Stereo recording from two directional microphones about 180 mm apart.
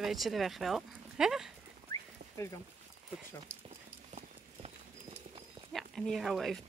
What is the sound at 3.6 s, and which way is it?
Clip-clop, 35° right (ahead or behind).